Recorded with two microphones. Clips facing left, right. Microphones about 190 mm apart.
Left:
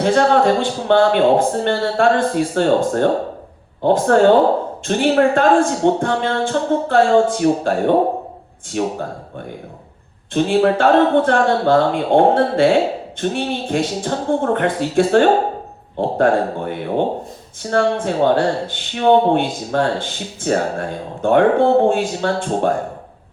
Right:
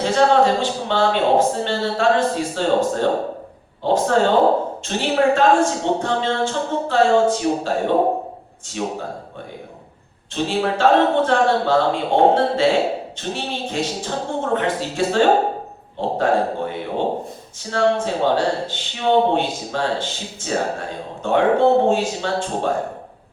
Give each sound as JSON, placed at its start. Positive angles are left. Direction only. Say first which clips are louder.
{"t": 0.0, "sound": "speech", "louder": "left 2 dB", "side_deg": 55}
{"t": 8.8, "sound": "speech", "louder": "left 5 dB", "side_deg": 55}
{"t": 10.3, "sound": "a man's voice", "louder": "left 6 dB", "side_deg": 55}